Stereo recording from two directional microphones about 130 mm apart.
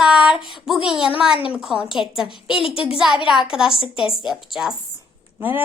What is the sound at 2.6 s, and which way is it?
Speech, 45° left (ahead or behind).